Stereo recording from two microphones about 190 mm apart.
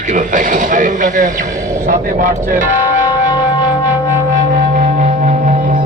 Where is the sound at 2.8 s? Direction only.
20° left (ahead or behind).